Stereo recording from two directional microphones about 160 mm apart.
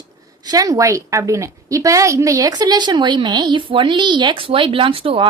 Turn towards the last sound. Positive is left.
turn(degrees=-35)  # may be behind; listen again after turning